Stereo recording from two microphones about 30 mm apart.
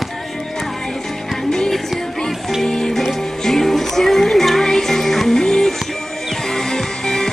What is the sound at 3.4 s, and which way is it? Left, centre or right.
Music, centre.